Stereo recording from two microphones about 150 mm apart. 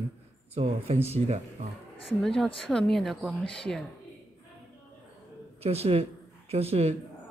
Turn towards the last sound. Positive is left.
turn(degrees=-45)  # may be behind; listen again after turning